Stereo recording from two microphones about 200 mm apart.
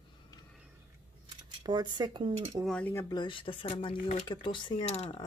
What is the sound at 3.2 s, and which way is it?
Speech, 25° left (ahead or behind).